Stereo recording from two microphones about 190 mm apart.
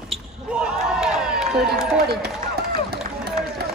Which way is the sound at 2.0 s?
55° right (ahead or behind).